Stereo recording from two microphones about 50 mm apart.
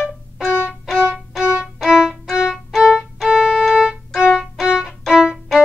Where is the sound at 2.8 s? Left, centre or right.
Centre.